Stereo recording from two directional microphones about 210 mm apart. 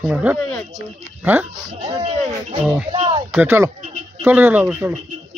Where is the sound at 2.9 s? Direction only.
25° right (ahead or behind).